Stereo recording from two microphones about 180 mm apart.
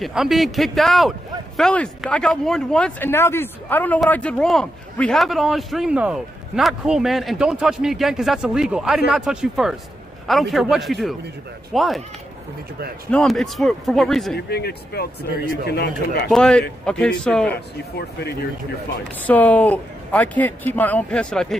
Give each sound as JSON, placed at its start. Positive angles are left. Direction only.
{"t": 0.0, "sound": "speech", "side_deg": 0}
{"t": 13.1, "sound": "speech", "side_deg": 5}
{"t": 14.3, "sound": "speech", "side_deg": 60}
{"t": 16.3, "sound": "speech", "side_deg": 5}
{"t": 17.5, "sound": "speech", "side_deg": 65}
{"t": 19.2, "sound": "speech", "side_deg": 10}